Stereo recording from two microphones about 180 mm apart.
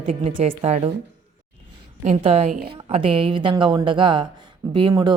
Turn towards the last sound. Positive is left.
turn(degrees=-25)  # may be behind; listen again after turning